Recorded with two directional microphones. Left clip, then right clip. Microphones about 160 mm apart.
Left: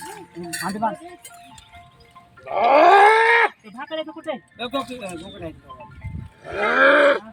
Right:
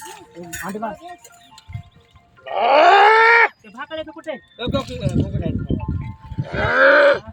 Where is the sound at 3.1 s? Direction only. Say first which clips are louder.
Right 3 dB; 30° right (ahead or behind).